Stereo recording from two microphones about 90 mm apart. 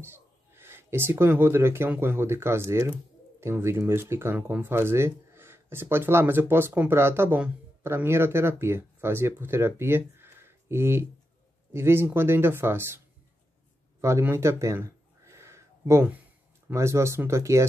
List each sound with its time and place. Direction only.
0.0 s speech: 25° right (ahead or behind)
14.0 s a sound: 30° right (ahead or behind)
16.6 s speech: 30° right (ahead or behind)